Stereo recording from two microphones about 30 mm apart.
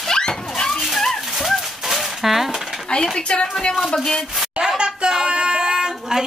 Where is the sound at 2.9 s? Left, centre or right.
Left.